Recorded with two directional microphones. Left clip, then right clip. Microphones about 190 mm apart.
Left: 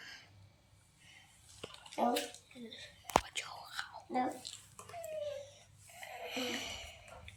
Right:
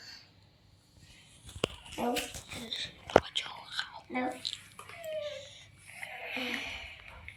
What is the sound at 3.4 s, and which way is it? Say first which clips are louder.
Whispering: right 6 dB; 20° left (ahead or behind).